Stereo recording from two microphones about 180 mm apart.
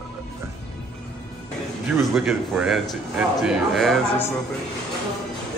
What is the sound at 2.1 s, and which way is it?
A man's voice, centre (ahead or behind).